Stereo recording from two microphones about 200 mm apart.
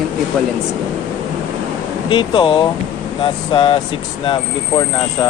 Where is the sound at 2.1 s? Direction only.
25° left (ahead or behind).